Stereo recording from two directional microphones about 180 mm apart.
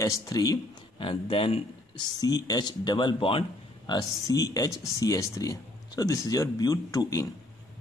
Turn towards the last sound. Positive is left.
turn(degrees=20)  # may be behind; listen again after turning